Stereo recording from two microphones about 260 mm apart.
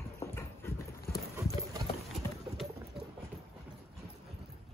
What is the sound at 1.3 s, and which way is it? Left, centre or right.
Clip-clop, centre.